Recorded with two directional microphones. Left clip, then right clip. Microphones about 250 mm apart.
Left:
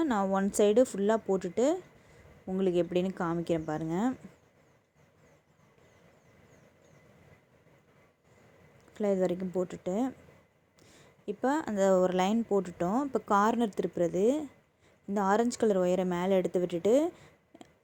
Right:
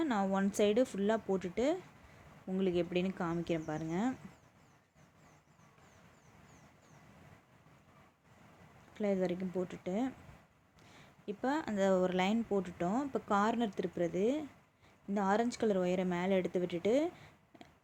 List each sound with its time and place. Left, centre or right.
0.0 s speech: centre
8.9 s speech: centre